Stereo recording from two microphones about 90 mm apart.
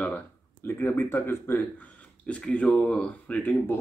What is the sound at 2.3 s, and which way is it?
Speech, 15° left (ahead or behind).